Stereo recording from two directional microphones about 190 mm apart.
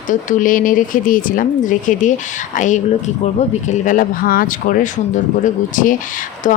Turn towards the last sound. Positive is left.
turn(degrees=40)  # may be behind; listen again after turning